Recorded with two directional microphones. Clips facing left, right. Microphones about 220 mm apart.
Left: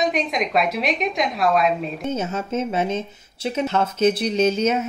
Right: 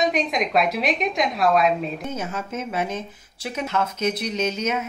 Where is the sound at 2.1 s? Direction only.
25° left (ahead or behind).